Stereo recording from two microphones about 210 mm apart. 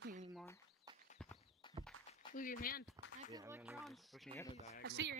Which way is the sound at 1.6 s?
20° left (ahead or behind).